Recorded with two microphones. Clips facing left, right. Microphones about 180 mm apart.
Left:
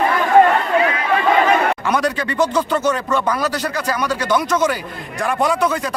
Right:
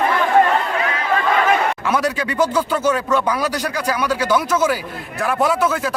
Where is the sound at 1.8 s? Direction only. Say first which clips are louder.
Left 1 dB; 5° right (ahead or behind).